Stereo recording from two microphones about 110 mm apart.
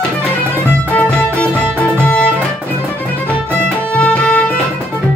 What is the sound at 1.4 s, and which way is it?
Music, 15° left (ahead or behind).